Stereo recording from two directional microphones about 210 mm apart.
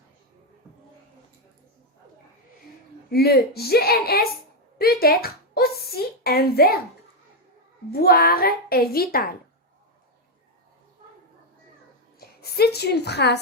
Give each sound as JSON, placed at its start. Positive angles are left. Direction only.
{"t": 3.1, "sound": "a woman's voice", "side_deg": 50}
{"t": 8.0, "sound": "a woman's voice", "side_deg": 45}
{"t": 12.2, "sound": "a woman's voice", "side_deg": 50}